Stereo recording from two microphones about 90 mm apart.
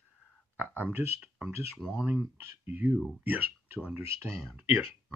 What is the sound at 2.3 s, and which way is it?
Speech, 20° right (ahead or behind).